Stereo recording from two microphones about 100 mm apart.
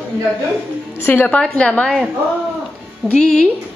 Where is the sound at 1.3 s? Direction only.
10° left (ahead or behind).